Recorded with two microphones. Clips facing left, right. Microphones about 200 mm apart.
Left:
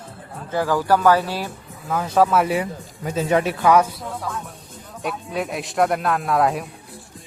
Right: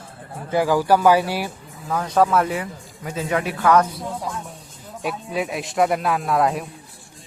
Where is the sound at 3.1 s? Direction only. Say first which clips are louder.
Left 4 dB; 25° left (ahead or behind).